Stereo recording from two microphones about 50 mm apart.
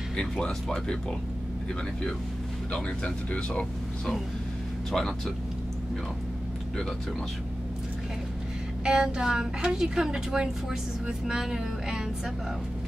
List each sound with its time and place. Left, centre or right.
0.2 s speech: centre
2.7 s speech: left
4.9 s speech: centre
8.8 s a woman's voice: centre